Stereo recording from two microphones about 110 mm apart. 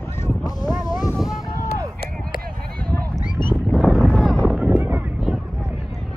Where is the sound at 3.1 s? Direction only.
40° left (ahead or behind).